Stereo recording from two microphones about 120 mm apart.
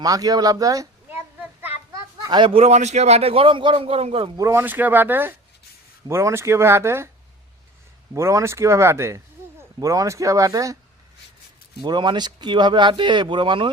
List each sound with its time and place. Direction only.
0.0 s speech: 30° right (ahead or behind)
1.1 s a sound: 15° right (ahead or behind)
2.2 s a man's voice: 40° right (ahead or behind)
4.4 s speech: 20° right (ahead or behind)
8.1 s speech: 25° right (ahead or behind)
11.8 s speech: 40° right (ahead or behind)